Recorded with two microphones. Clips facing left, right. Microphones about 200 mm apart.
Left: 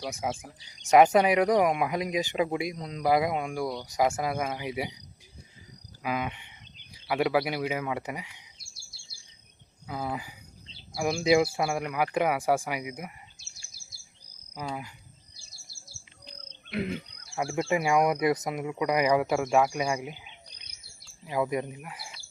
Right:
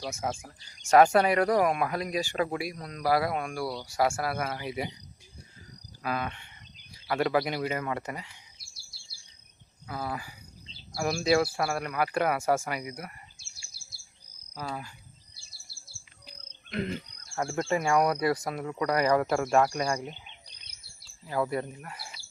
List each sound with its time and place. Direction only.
0.0 s speech: 15° left (ahead or behind)
6.0 s cricket: 15° left (ahead or behind)
6.9 s speech: 10° left (ahead or behind)
9.8 s speech: 15° left (ahead or behind)
14.6 s speech: 15° left (ahead or behind)
15.4 s bird vocalization: 45° left (ahead or behind)
16.7 s speech: 10° left (ahead or behind)